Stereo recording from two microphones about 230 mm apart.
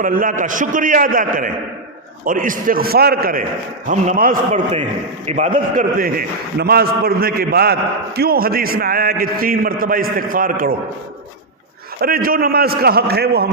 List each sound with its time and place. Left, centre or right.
0.0 s a man's voice: right
11.9 s a man's voice: right